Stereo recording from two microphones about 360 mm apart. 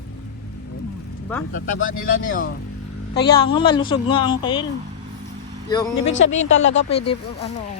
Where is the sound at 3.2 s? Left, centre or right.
Centre.